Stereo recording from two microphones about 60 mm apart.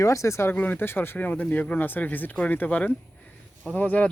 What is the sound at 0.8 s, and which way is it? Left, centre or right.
Speech, left.